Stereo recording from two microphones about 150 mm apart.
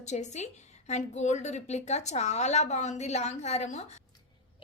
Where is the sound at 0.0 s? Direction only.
50° left (ahead or behind).